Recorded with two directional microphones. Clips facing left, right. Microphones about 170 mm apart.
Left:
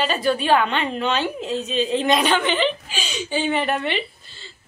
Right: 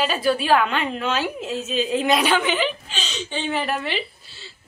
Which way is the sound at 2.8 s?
10° left (ahead or behind).